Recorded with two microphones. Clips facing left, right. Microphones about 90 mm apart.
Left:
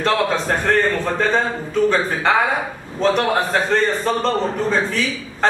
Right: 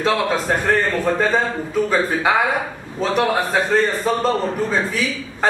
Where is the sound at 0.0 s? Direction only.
5° right (ahead or behind).